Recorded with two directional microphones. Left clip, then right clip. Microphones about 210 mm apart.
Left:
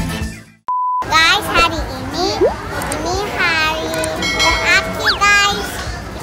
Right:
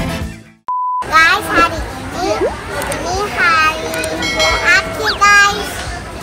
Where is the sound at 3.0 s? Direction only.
35° left (ahead or behind).